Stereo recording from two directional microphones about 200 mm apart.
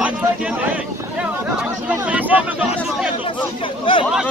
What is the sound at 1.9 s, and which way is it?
Speech, 10° right (ahead or behind).